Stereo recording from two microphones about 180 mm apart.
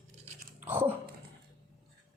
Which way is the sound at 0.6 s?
10° right (ahead or behind).